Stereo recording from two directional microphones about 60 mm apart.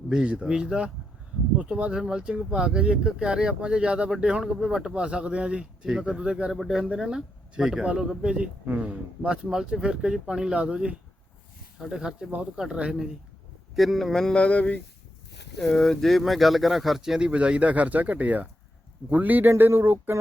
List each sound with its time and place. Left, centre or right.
0.1 s speech: centre
6.6 s speech: centre
13.7 s speech: centre
14.3 s speech: left
15.5 s a man's voice: centre; by 19.5 s right
19.5 s speech: right